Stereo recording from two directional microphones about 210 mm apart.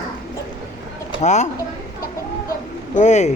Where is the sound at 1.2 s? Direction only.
35° left (ahead or behind).